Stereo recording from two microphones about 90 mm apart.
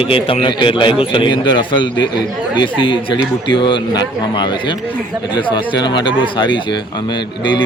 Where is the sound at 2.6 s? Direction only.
70° left (ahead or behind).